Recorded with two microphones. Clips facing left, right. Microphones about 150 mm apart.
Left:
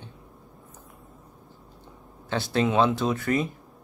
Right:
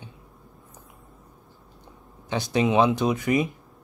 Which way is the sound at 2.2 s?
15° right (ahead or behind).